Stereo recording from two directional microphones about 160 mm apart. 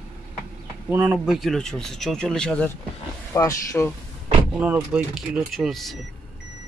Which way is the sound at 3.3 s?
20° left (ahead or behind).